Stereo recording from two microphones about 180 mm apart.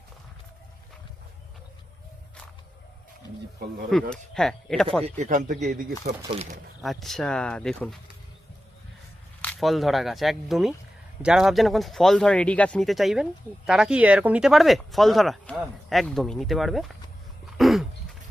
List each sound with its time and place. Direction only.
4.1 s speech: 5° left (ahead or behind)
5.0 s a man's voice: 40° right (ahead or behind)
6.8 s speech: centre (ahead or behind)
9.4 s speech: 5° left (ahead or behind)
17.6 s dog: centre (ahead or behind)